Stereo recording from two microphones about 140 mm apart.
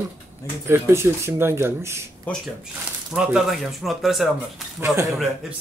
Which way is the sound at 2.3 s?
10° left (ahead or behind).